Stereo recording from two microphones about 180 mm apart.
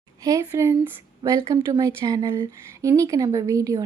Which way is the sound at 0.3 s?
15° right (ahead or behind).